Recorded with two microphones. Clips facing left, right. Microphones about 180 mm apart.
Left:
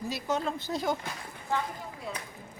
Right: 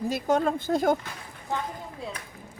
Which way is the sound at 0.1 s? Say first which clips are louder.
Right 7 dB; 50° right (ahead or behind).